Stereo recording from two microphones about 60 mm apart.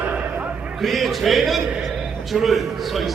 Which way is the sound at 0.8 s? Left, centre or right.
Centre.